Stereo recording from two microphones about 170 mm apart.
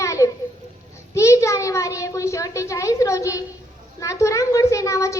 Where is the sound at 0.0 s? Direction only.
15° left (ahead or behind).